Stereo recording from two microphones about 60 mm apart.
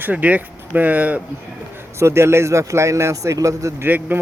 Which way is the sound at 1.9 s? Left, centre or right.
Right.